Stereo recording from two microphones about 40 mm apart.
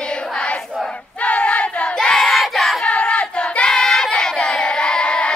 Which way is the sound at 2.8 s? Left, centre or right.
Left.